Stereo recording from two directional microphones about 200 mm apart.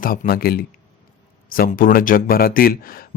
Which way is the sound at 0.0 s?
45° left (ahead or behind).